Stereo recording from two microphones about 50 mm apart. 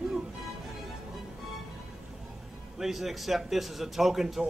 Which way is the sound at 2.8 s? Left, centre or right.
Centre.